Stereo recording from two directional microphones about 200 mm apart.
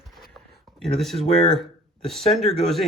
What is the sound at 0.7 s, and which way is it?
Speech, centre (ahead or behind).